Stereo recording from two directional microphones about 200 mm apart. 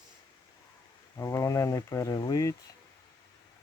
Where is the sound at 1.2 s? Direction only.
15° left (ahead or behind).